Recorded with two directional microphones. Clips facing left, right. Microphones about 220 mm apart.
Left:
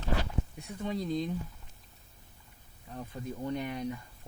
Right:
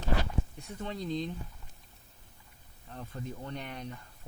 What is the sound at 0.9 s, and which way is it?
Speech, 10° left (ahead or behind).